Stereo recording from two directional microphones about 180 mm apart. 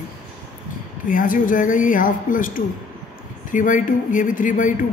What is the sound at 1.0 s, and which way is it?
Speech, 50° left (ahead or behind).